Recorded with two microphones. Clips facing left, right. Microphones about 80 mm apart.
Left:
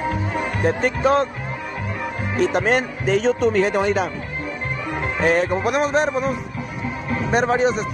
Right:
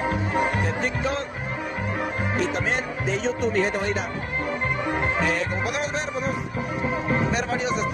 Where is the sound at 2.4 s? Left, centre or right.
Left.